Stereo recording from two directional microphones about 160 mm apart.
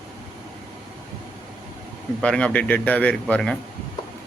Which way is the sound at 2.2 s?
5° left (ahead or behind).